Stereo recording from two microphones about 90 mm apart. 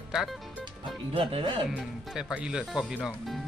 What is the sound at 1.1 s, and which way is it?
Speech, 85° right.